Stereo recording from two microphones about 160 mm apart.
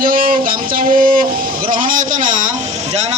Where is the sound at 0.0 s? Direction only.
60° right (ahead or behind).